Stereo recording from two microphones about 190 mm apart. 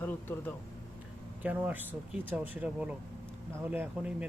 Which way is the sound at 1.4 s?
10° right (ahead or behind).